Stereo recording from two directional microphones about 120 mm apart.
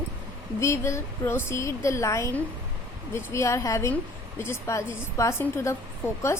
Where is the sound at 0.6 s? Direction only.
25° left (ahead or behind).